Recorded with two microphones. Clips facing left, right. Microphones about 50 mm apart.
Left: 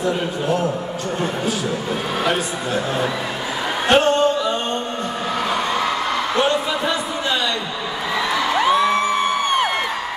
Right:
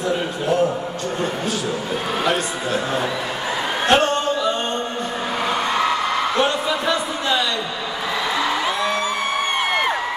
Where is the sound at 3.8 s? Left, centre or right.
Centre.